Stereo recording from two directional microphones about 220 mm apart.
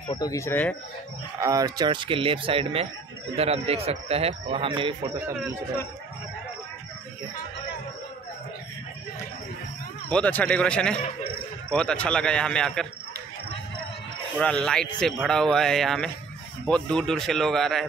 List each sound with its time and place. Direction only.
0.1 s speech: 15° left (ahead or behind)
1.4 s speech: 15° right (ahead or behind)
10.0 s speech: 5° left (ahead or behind)
14.4 s speech: 5° left (ahead or behind)